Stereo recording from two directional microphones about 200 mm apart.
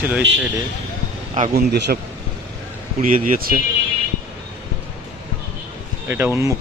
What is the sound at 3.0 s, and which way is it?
Speech, 40° right (ahead or behind).